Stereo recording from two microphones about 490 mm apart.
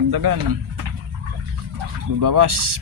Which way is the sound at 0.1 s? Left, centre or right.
Right.